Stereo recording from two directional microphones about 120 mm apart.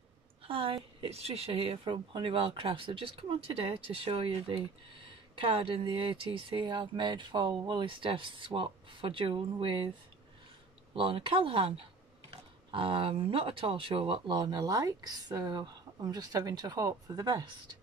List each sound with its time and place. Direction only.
0.5 s a woman's voice: 50° right (ahead or behind)
1.9 s speech: 45° right (ahead or behind)
11.0 s speech: 45° right (ahead or behind)
12.7 s speech: 45° right (ahead or behind)